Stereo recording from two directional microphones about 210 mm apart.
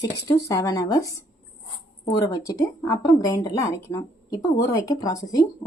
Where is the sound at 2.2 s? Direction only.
15° left (ahead or behind).